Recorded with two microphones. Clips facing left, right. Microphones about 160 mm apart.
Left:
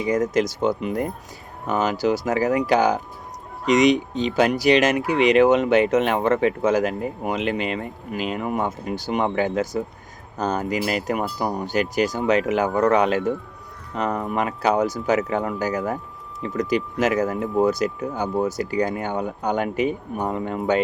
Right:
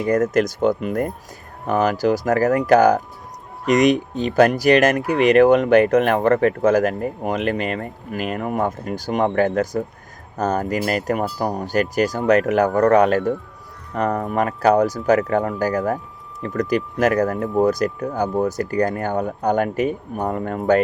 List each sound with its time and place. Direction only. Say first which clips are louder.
0.0 s speech: right 3 dB; 60° right (ahead or behind); by 12.3 s 40° right (ahead or behind)
12.3 s speech: right 5 dB; 60° right (ahead or behind)
12.9 s speech: right 4 dB; 40° right (ahead or behind)
13.9 s speech: right 3 dB; 55° right (ahead or behind)
17.6 s speech: right 2 dB; 40° right (ahead or behind)